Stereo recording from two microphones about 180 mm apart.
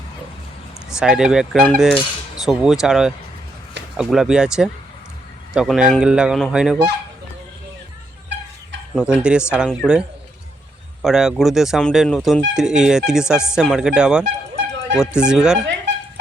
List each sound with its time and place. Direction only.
0.9 s speech: 5° right (ahead or behind)
9.0 s speech: 5° right (ahead or behind)
11.0 s speech: 5° right (ahead or behind)
14.5 s a sound: 70° right (ahead or behind)
14.9 s speech: 5° right (ahead or behind)